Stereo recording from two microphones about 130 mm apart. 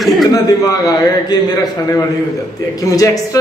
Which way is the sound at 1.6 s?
25° left (ahead or behind).